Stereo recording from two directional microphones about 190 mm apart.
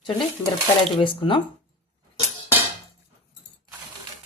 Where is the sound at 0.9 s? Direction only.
25° left (ahead or behind).